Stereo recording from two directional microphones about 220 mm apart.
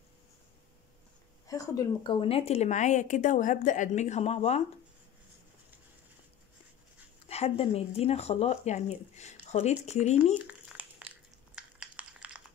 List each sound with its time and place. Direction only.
1.5 s speech: 15° left (ahead or behind)
7.2 s speech: 30° left (ahead or behind)
10.4 s a sound: 5° right (ahead or behind)